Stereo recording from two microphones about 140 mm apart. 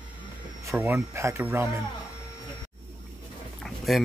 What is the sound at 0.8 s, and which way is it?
Speech, 20° right (ahead or behind).